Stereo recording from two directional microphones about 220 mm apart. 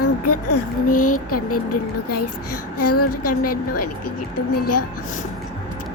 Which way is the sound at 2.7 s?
90° left.